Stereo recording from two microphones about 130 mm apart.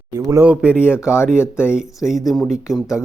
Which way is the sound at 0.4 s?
10° right (ahead or behind).